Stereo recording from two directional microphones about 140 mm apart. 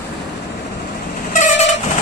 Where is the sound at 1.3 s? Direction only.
60° left (ahead or behind).